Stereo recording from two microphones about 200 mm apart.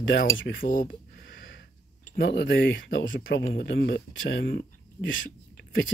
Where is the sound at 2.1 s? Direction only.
60° left (ahead or behind).